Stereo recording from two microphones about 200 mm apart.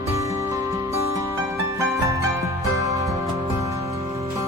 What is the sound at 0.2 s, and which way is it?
Music, 15° right (ahead or behind).